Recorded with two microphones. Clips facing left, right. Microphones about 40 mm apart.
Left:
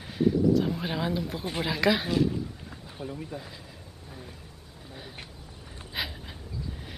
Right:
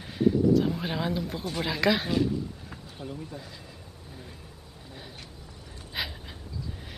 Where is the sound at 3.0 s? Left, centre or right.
Left.